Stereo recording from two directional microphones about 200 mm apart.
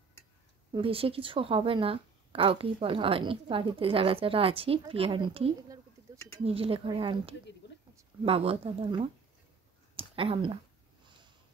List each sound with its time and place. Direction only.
0.7 s a woman's voice: 30° right (ahead or behind)